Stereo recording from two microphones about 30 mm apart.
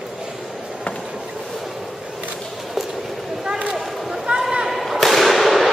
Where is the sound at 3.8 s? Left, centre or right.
Centre.